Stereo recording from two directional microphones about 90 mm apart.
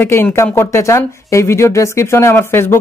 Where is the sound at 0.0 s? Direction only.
25° left (ahead or behind).